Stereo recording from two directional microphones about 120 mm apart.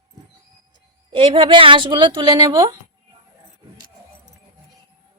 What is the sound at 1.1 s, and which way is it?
A woman's voice, 45° right (ahead or behind).